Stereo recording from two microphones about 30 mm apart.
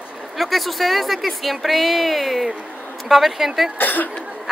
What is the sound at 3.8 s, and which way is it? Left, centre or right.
Speech, left.